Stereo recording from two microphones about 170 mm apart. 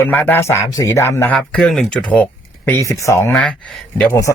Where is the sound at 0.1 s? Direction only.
10° left (ahead or behind).